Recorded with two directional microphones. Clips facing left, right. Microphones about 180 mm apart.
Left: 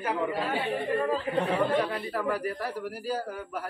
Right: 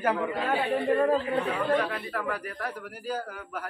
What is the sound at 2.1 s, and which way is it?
Speech, 35° left (ahead or behind).